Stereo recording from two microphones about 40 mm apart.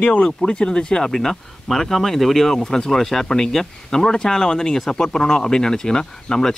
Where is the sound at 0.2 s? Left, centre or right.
Centre.